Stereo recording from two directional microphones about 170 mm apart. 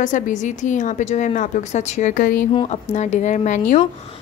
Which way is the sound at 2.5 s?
30° left (ahead or behind).